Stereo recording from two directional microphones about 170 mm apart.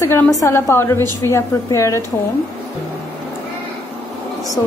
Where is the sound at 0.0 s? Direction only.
15° left (ahead or behind).